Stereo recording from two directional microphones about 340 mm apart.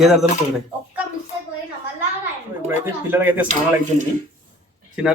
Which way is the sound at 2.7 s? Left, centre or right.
Centre.